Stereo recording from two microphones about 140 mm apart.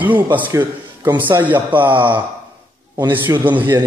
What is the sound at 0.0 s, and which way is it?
A man's voice, 15° right (ahead or behind).